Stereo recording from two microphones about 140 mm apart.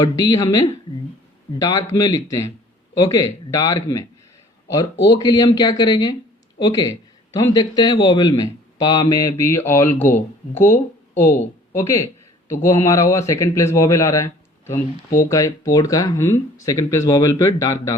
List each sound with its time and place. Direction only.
0.0 s a man's voice: 25° left (ahead or behind)